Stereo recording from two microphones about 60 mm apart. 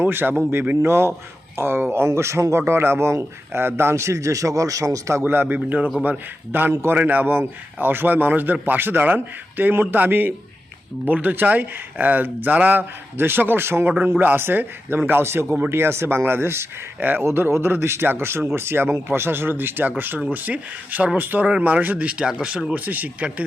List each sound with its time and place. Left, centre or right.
0.0 s speech: right
0.9 s speech: right
3.9 s speech: right
5.2 s speech: right
14.0 s speech: right
17.0 s speech: right
17.2 s speech: right; by 22.7 s centre
22.7 s speech: right